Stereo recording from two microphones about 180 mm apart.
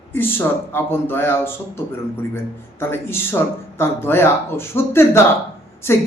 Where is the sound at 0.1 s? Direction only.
10° left (ahead or behind).